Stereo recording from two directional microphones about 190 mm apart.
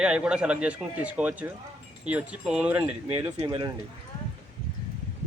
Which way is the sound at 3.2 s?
20° right (ahead or behind).